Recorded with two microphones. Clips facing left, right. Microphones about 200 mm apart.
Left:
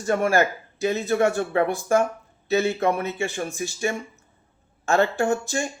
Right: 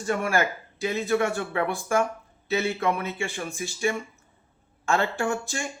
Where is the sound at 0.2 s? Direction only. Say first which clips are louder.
Left 5 dB; 40° left (ahead or behind).